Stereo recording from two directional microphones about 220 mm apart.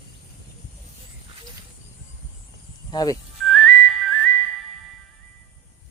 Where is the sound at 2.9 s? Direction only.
15° left (ahead or behind).